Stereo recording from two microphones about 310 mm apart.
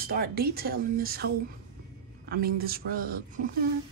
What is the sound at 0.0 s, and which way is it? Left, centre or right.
Speech, right.